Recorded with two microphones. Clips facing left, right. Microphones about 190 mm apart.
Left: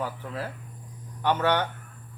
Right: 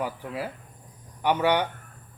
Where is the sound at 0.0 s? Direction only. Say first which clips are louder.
Right 2 dB; 10° right (ahead or behind).